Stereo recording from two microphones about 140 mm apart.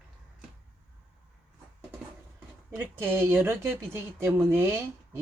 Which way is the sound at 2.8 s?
15° right (ahead or behind).